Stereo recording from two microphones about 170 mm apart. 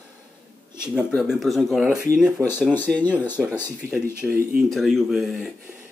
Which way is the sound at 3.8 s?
65° right (ahead or behind).